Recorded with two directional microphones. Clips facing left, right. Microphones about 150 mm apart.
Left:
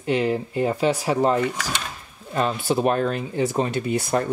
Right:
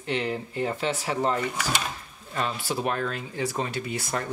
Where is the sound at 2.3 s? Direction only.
25° left (ahead or behind).